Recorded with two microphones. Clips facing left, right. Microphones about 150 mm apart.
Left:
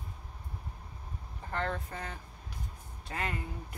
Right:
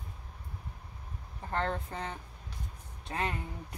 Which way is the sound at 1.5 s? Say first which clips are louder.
Right 2 dB; 30° right (ahead or behind).